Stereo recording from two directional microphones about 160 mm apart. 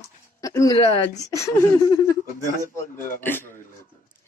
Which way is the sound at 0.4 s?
20° left (ahead or behind).